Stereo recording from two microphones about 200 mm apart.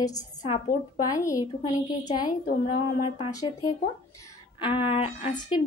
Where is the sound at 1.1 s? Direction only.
15° left (ahead or behind).